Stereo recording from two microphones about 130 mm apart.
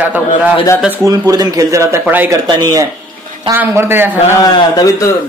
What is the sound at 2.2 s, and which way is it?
Speech, 35° right (ahead or behind).